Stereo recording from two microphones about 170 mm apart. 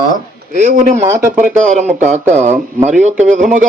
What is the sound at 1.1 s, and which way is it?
Speech, 15° right (ahead or behind).